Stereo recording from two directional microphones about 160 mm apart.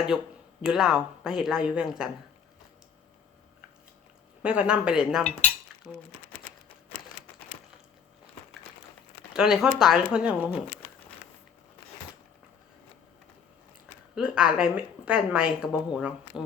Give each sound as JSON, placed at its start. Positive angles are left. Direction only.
{"t": 0.1, "sound": "a woman's voice", "side_deg": 0}
{"t": 4.4, "sound": "a woman's voice", "side_deg": -5}
{"t": 9.3, "sound": "a woman's voice", "side_deg": -5}
{"t": 13.8, "sound": "a woman's voice", "side_deg": -5}